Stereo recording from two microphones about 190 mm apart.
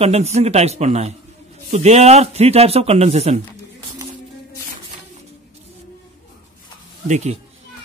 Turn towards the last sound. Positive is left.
turn(degrees=-35)  # may be behind; listen again after turning